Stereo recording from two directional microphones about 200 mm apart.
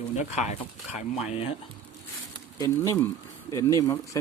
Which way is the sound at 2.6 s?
15° left (ahead or behind).